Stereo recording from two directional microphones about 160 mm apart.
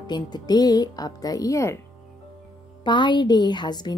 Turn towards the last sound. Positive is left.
turn(degrees=25)  # may be behind; listen again after turning